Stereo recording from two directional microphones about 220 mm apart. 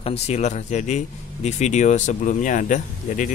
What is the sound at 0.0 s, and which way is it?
Speech, 30° left (ahead or behind).